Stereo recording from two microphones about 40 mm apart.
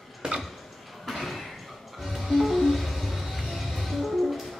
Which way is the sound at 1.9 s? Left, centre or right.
Centre.